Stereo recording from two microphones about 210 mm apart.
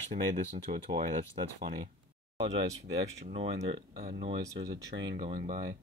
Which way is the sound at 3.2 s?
25° right (ahead or behind).